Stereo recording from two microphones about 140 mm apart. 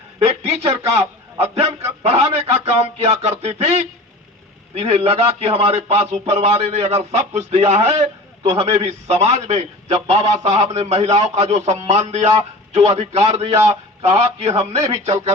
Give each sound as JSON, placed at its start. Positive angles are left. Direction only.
{"t": 0.2, "sound": "a man's voice", "side_deg": -50}